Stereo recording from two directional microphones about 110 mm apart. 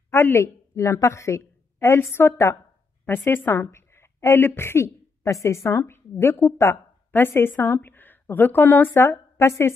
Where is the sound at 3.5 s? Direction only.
25° left (ahead or behind).